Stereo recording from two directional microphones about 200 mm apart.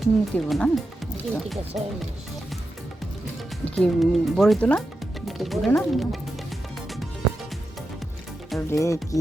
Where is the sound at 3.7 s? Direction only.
5° left (ahead or behind).